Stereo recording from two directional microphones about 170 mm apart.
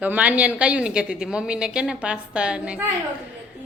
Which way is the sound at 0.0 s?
10° right (ahead or behind).